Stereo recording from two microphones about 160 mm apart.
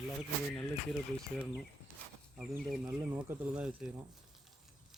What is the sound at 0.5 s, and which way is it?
Speech, centre (ahead or behind).